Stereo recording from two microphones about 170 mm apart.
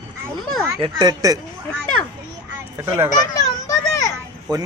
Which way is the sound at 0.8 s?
25° right (ahead or behind).